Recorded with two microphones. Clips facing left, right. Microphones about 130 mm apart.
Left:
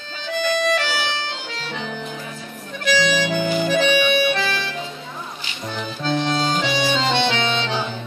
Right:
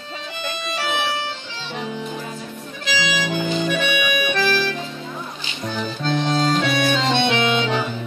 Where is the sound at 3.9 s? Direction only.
35° left (ahead or behind).